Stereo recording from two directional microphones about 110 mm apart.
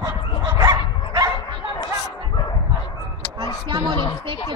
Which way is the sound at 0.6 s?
30° right (ahead or behind).